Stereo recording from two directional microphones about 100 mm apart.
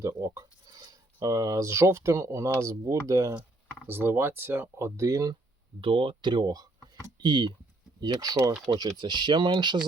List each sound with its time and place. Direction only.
0.0 s speech: 35° right (ahead or behind)
3.8 s speech: 20° right (ahead or behind)
5.8 s speech: 60° right (ahead or behind)
8.0 s speech: 40° right (ahead or behind)